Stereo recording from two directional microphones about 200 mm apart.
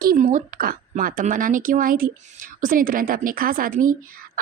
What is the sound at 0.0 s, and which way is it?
A woman's voice, 45° right (ahead or behind).